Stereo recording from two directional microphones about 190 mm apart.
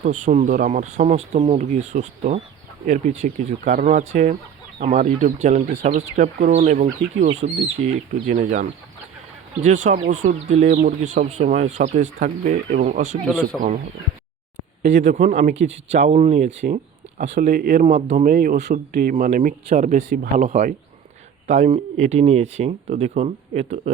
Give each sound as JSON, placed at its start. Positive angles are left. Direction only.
{"t": 0.0, "sound": "speech", "side_deg": -40}
{"t": 9.6, "sound": "speech", "side_deg": -40}
{"t": 13.2, "sound": "speech", "side_deg": 5}
{"t": 15.0, "sound": "speech", "side_deg": -40}
{"t": 18.3, "sound": "a man's voice", "side_deg": -50}